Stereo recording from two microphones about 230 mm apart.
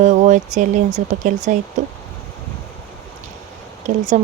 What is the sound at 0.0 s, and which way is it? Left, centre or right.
Speech, right.